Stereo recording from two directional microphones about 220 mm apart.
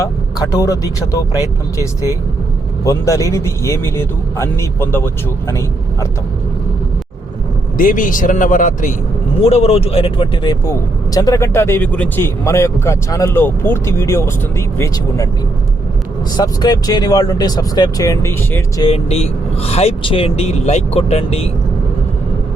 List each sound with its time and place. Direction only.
0.3 s a man's voice: 15° left (ahead or behind)
7.8 s a man's voice: 40° left (ahead or behind); by 15.3 s 15° left (ahead or behind)
16.4 s a man's voice: 20° left (ahead or behind)
18.9 s speech: 30° left (ahead or behind)